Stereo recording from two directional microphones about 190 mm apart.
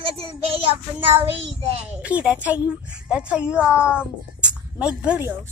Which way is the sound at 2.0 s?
5° right (ahead or behind).